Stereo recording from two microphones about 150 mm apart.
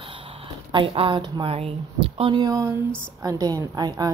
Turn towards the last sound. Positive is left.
turn(degrees=-25)  # may be behind; listen again after turning